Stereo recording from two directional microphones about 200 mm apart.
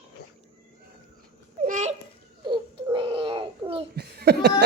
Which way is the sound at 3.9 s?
50° right (ahead or behind).